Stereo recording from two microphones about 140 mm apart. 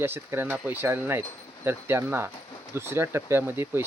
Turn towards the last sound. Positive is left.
turn(degrees=-15)  # may be behind; listen again after turning